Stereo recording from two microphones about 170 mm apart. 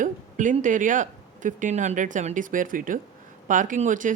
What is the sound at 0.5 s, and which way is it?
Speech, 50° right (ahead or behind).